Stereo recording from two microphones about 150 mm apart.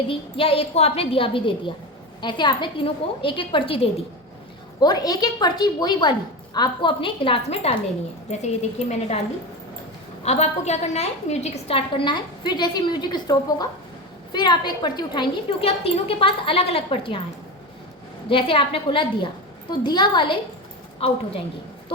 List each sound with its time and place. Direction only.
0.1 s a woman's voice: 40° left (ahead or behind)
4.8 s a woman's voice: 25° left (ahead or behind); by 9.2 s 45° left (ahead or behind)
10.2 s a woman's voice: 45° left (ahead or behind)
18.3 s a woman's voice: 35° left (ahead or behind)